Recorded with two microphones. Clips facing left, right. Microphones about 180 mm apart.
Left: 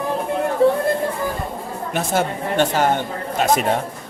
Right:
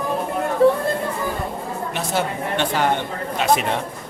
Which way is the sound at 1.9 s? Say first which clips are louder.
Left 4 dB; 50° left (ahead or behind).